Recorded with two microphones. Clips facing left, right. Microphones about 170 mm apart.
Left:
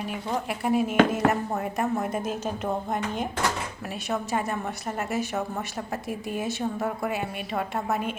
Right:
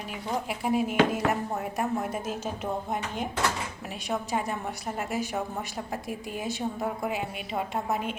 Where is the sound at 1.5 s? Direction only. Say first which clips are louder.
Left 2 dB; centre (ahead or behind).